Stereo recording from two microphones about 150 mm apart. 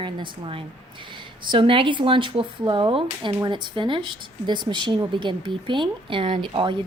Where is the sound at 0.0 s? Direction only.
35° right (ahead or behind).